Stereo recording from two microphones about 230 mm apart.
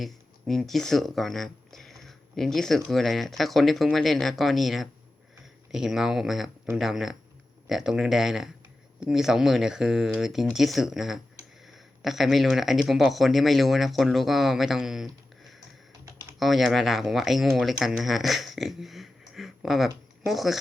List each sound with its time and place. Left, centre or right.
0.0 s speech: centre
16.4 s speech: centre